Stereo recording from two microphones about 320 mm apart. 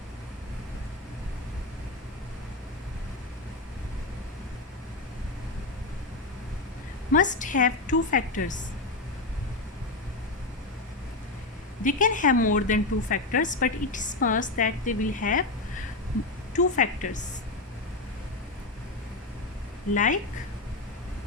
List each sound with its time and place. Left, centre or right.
7.1 s a woman's voice: left
11.8 s a woman's voice: left
16.7 s a woman's voice: left
19.9 s a woman's voice: left